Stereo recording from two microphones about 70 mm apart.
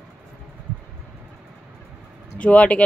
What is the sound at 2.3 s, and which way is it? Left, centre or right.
Speech, centre.